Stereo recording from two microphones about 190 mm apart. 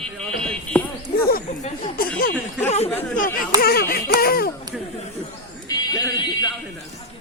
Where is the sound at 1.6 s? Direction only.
40° left (ahead or behind).